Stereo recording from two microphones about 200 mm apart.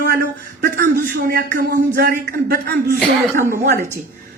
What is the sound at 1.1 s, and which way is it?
A man's voice, 50° right (ahead or behind).